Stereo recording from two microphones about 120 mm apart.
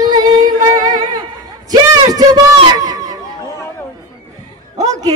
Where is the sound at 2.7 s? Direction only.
30° right (ahead or behind).